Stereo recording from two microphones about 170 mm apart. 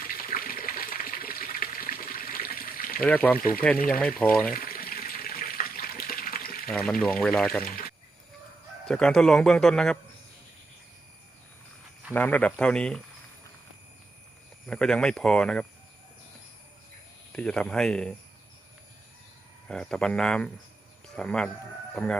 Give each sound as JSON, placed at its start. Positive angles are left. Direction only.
{"t": 0.1, "sound": "water", "side_deg": 55}
{"t": 3.0, "sound": "speech", "side_deg": 10}
{"t": 3.3, "sound": "speech", "side_deg": 55}
{"t": 3.8, "sound": "speech", "side_deg": 10}
{"t": 4.5, "sound": "water", "side_deg": 60}
{"t": 7.0, "sound": "a man's voice", "side_deg": 5}
{"t": 7.6, "sound": "speech", "side_deg": 60}
{"t": 8.9, "sound": "a man's voice", "side_deg": 5}
{"t": 12.1, "sound": "speech", "side_deg": 10}
{"t": 14.7, "sound": "a man's voice", "side_deg": 5}
{"t": 17.3, "sound": "a man's voice", "side_deg": 5}
{"t": 19.6, "sound": "a man's voice", "side_deg": 5}